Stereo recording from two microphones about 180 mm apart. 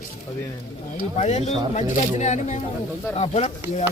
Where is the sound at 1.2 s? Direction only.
35° left (ahead or behind).